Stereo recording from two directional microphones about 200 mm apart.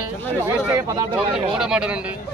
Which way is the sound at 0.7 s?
15° right (ahead or behind).